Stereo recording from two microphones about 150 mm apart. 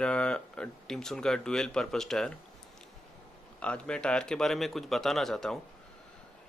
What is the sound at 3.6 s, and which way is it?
Speech, 5° left (ahead or behind).